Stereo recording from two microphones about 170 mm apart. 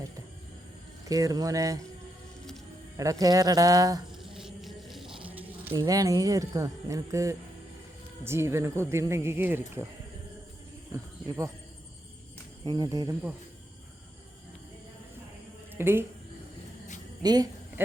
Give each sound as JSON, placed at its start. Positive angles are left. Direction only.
{"t": 1.0, "sound": "speech", "side_deg": -20}
{"t": 3.0, "sound": "speech", "side_deg": -20}
{"t": 4.2, "sound": "music", "side_deg": 0}
{"t": 5.3, "sound": "a sound", "side_deg": -10}
{"t": 5.7, "sound": "speech", "side_deg": -20}
{"t": 10.9, "sound": "speech", "side_deg": -20}
{"t": 12.6, "sound": "speech", "side_deg": -25}
{"t": 15.7, "sound": "speech", "side_deg": -15}
{"t": 17.2, "sound": "speech", "side_deg": -25}
{"t": 17.8, "sound": "speech", "side_deg": -15}